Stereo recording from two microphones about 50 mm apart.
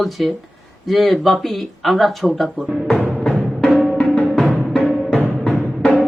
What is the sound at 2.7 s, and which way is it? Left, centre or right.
Music, centre.